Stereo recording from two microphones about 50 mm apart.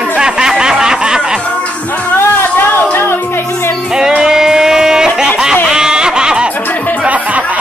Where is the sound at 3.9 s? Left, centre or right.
Centre.